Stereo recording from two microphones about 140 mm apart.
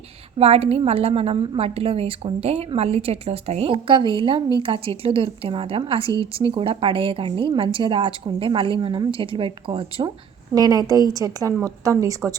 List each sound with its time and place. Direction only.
0.3 s a woman's voice: 45° right (ahead or behind)
6.1 s speech: 25° left (ahead or behind)
6.5 s a woman's voice: 40° right (ahead or behind)
10.5 s a woman's voice: 25° right (ahead or behind)